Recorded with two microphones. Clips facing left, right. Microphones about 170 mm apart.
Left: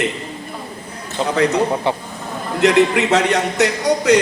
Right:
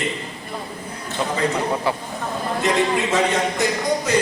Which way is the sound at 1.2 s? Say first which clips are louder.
Left 6 dB; 25° left (ahead or behind).